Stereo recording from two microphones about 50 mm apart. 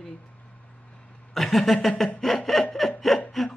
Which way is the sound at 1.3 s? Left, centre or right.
Centre.